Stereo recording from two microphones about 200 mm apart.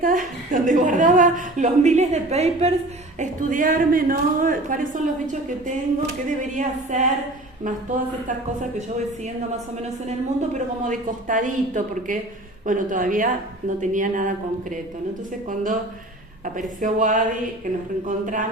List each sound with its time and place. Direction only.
0.0 s a woman's voice: 45° right (ahead or behind)
3.2 s a woman's voice: 40° right (ahead or behind)
10.1 s a woman's voice: 35° right (ahead or behind)
15.4 s a woman's voice: 40° right (ahead or behind)